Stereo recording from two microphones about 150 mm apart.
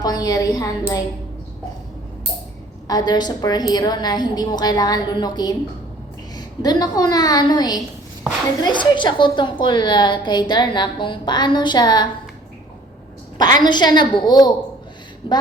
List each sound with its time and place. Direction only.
0.0 s a woman's voice: 25° left (ahead or behind)
2.8 s a woman's voice: 25° left (ahead or behind)
13.4 s a woman's voice: 30° left (ahead or behind)